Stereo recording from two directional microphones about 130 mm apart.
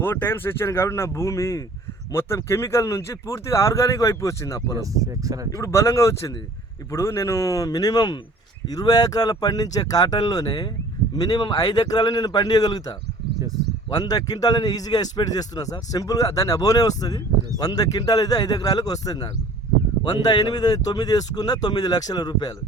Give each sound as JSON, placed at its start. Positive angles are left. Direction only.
{"t": 0.0, "sound": "a man's voice", "side_deg": 15}
{"t": 4.8, "sound": "speech", "side_deg": -25}
{"t": 5.5, "sound": "a man's voice", "side_deg": 20}
{"t": 20.3, "sound": "speech", "side_deg": 30}